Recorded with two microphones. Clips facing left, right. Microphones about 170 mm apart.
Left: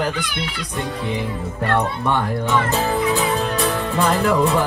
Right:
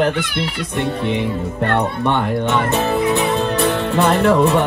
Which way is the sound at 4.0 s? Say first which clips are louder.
Right 4 dB; 30° right (ahead or behind).